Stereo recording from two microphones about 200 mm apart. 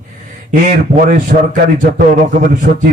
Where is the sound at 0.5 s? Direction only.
40° right (ahead or behind).